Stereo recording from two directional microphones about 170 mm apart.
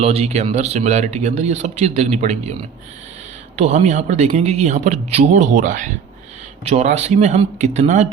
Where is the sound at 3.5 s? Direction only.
40° right (ahead or behind).